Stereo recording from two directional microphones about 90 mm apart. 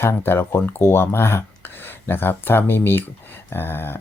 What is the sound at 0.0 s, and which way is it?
Speech, 25° left (ahead or behind).